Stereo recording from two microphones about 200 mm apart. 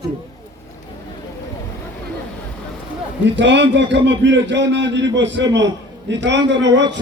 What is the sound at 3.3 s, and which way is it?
A man's voice, 60° right (ahead or behind).